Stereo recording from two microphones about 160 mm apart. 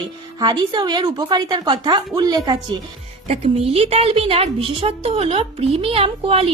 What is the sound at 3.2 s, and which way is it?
A woman's voice, 40° right (ahead or behind).